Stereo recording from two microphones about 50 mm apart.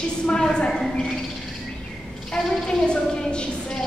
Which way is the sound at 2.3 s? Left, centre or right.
Centre.